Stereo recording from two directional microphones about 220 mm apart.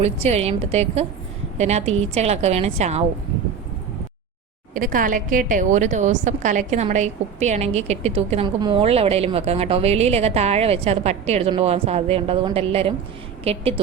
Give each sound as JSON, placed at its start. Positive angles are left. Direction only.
{"t": 0.0, "sound": "a woman's voice", "side_deg": -30}
{"t": 4.7, "sound": "a woman's voice", "side_deg": -40}